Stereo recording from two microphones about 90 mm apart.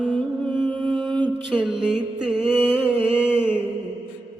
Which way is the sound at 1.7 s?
10° right (ahead or behind).